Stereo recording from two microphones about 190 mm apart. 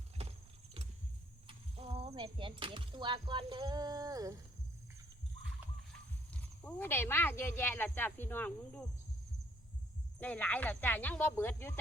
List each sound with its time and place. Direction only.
0.2 s vehicle: 30° right (ahead or behind)
1.5 s speech: 30° right (ahead or behind)
6.3 s speech: 5° left (ahead or behind)
10.2 s speech: 10° left (ahead or behind)